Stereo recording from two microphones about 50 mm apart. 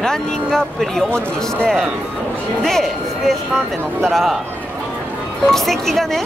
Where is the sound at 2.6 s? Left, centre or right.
Centre.